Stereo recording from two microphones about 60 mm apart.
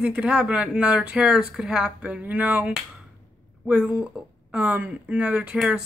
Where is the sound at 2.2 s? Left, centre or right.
Right.